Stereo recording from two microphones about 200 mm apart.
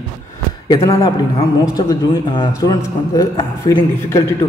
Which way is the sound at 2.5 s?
15° left (ahead or behind).